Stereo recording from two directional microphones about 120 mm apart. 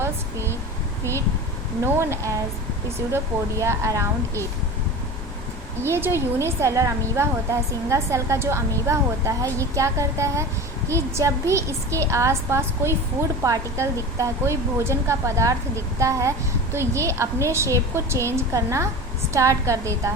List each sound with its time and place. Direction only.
0.0 s a sound: 20° right (ahead or behind)
1.8 s a woman's voice: 25° right (ahead or behind)
3.6 s a woman's voice: 25° right (ahead or behind)
5.8 s a woman's voice: 20° right (ahead or behind)